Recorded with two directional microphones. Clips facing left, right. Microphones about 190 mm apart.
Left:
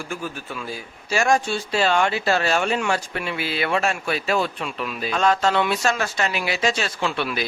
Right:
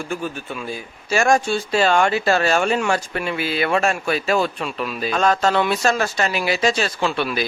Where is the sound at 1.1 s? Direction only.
50° right (ahead or behind).